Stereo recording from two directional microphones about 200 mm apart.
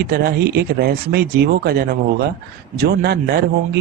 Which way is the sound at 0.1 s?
50° right (ahead or behind).